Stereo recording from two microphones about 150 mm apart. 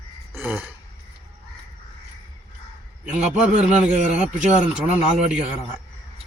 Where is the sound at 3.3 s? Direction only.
50° right (ahead or behind).